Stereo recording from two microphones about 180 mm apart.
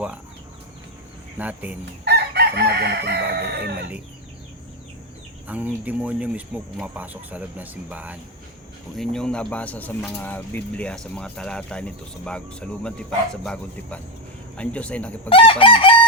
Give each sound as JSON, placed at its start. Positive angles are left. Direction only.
{"t": 1.4, "sound": "speech", "side_deg": -10}
{"t": 1.8, "sound": "chicken", "side_deg": -65}
{"t": 5.5, "sound": "speech", "side_deg": -10}
{"t": 9.0, "sound": "speech", "side_deg": 5}
{"t": 15.3, "sound": "chicken", "side_deg": 30}